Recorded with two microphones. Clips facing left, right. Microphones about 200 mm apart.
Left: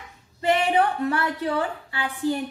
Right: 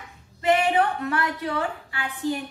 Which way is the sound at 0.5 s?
30° left (ahead or behind).